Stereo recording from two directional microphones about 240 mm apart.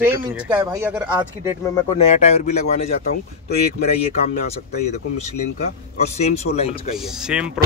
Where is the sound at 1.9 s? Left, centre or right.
Left.